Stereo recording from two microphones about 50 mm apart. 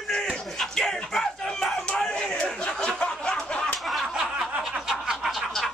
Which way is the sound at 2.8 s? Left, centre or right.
Centre.